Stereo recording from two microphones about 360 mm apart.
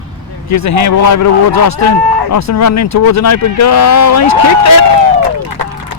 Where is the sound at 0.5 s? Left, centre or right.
Left.